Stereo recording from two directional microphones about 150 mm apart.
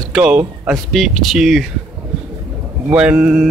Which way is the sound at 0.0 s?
5° right (ahead or behind).